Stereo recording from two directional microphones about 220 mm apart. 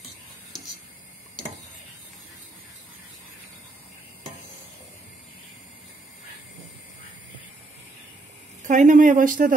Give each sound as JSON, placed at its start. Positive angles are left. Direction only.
{"t": 8.6, "sound": "speech", "side_deg": -35}